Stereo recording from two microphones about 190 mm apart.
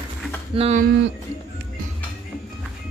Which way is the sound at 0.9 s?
70° right (ahead or behind).